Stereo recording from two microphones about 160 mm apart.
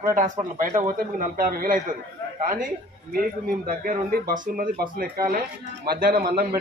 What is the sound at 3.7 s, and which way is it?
A man's voice, 65° right (ahead or behind).